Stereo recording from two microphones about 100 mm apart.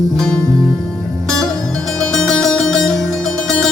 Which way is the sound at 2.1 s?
5° left (ahead or behind).